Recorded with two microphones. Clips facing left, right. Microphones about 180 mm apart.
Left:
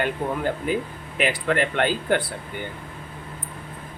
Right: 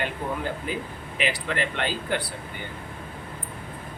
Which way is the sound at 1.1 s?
50° left (ahead or behind).